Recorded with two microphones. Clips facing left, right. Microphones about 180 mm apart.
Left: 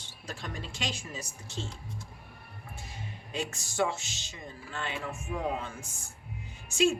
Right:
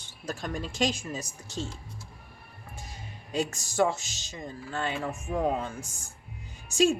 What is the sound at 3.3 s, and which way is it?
Speech, 40° right (ahead or behind).